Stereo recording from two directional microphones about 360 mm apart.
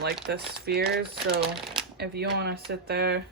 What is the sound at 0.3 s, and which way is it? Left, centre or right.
Speech, right.